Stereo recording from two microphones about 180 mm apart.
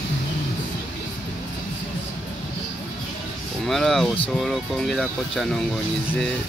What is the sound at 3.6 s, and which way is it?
Speech, centre (ahead or behind).